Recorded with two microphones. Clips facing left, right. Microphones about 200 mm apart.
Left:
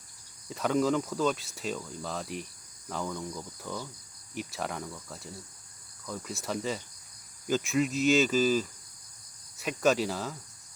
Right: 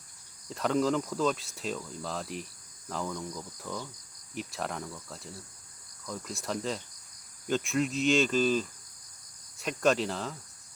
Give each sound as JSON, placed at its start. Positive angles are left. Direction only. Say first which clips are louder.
{"t": 0.4, "sound": "speech", "louder": "left 1 dB", "side_deg": 0}